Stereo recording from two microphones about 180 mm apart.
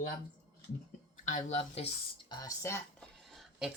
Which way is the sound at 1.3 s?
40° left (ahead or behind).